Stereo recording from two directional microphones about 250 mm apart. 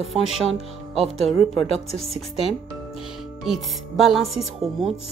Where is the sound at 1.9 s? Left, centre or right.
Left.